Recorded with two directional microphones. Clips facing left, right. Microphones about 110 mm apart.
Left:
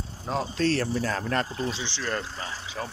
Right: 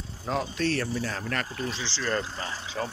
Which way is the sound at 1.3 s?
30° left (ahead or behind).